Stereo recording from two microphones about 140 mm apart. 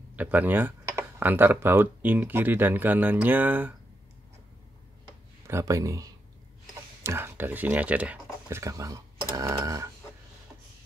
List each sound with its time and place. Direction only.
0.1 s speech: 10° right (ahead or behind)
5.5 s speech: 20° right (ahead or behind)